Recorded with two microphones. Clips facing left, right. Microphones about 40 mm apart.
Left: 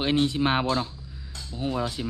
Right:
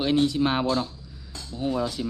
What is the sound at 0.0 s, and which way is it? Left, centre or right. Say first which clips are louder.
Speech: right 1 dB; left.